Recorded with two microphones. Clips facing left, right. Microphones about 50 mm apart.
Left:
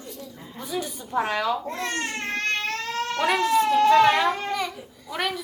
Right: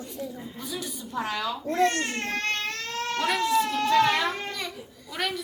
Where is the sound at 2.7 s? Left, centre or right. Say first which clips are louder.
Left 3 dB; left.